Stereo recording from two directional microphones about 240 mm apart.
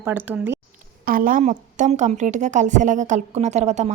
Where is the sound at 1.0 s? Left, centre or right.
Right.